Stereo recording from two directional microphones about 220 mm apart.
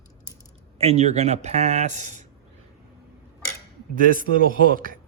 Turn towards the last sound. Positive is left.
turn(degrees=-40)  # may be behind; listen again after turning